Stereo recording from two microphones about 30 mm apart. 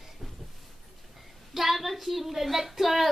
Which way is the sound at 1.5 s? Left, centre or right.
Centre.